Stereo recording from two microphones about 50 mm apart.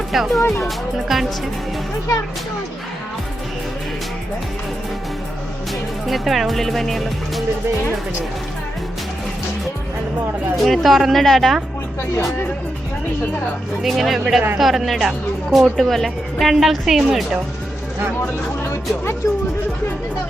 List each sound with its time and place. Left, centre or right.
0.1 s speech: centre
6.1 s speech: centre
10.6 s speech: centre
13.8 s speech: centre
18.2 s speech: left